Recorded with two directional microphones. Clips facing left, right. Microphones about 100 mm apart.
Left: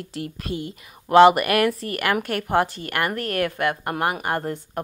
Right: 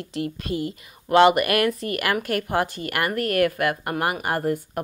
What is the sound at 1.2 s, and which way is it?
Speech, centre (ahead or behind).